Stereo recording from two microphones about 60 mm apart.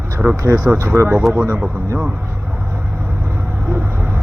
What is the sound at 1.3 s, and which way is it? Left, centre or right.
Speech, right.